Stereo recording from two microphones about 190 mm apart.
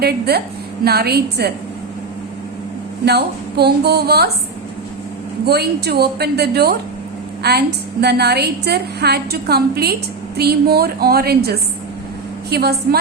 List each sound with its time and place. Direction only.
0.0 s a woman's voice: 55° right (ahead or behind)
3.1 s a woman's voice: 60° right (ahead or behind)
5.5 s a woman's voice: 60° right (ahead or behind)